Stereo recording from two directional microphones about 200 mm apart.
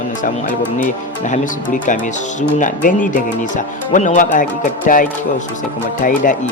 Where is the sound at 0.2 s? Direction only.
40° left (ahead or behind).